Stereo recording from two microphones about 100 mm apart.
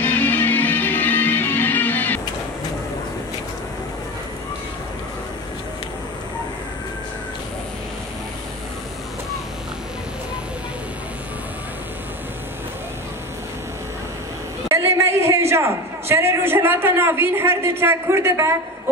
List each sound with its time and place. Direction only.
0.0 s music: 20° left (ahead or behind)
14.7 s a man's voice: 30° right (ahead or behind)